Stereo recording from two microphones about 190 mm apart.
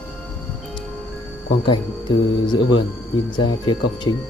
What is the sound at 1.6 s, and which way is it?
Speech, 25° left (ahead or behind).